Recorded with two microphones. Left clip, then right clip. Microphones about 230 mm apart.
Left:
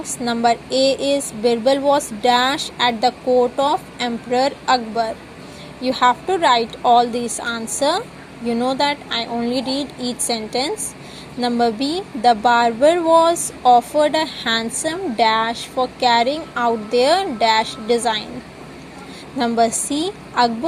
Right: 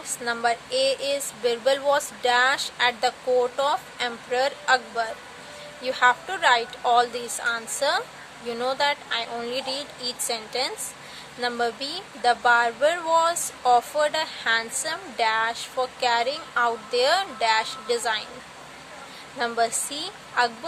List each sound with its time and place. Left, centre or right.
0.0 s speech: centre
19.4 s speech: centre
19.9 s a woman's voice: centre
20.4 s speech: centre